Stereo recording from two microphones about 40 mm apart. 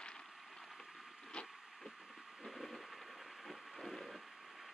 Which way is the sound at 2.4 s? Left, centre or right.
Centre.